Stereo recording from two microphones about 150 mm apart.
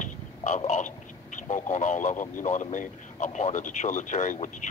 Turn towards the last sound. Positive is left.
turn(degrees=55)  # may be behind; listen again after turning